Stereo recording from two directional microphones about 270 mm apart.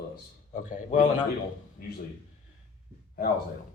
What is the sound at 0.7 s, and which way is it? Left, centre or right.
Speech, left.